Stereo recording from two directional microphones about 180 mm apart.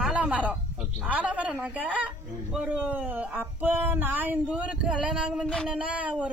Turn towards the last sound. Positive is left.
turn(degrees=-10)  # may be behind; listen again after turning